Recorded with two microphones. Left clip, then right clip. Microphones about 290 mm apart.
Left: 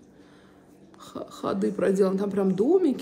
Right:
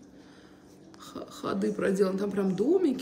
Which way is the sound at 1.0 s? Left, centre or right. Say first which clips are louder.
Left 4 dB; centre.